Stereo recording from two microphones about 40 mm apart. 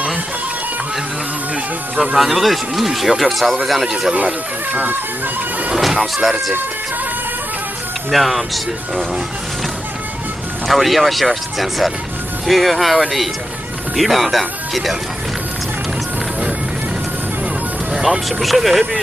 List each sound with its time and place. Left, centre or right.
2.1 s speech: centre
4.1 s speech: right
5.8 s music: centre
8.1 s speech: centre
10.7 s speech: centre
17.9 s speech: centre